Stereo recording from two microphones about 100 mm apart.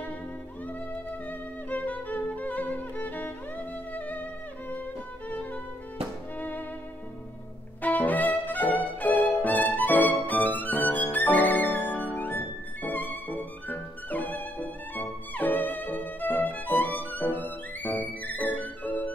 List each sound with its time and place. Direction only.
1.7 s music: 15° left (ahead or behind)
7.8 s music: 15° left (ahead or behind)